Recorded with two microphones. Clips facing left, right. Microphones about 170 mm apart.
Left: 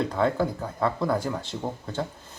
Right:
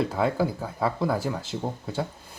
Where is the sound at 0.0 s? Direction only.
5° right (ahead or behind).